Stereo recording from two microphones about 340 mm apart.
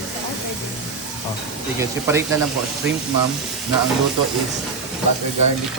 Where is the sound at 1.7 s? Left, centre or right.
Centre.